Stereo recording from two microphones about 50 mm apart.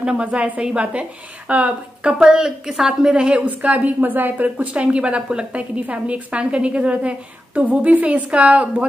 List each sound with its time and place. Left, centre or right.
0.0 s a woman's voice: right
2.1 s a woman's voice: centre